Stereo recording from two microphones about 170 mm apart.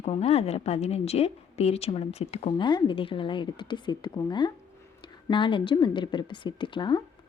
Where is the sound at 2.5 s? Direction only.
25° left (ahead or behind).